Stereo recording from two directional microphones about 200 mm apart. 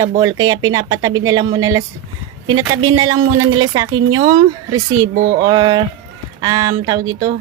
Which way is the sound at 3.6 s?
20° right (ahead or behind).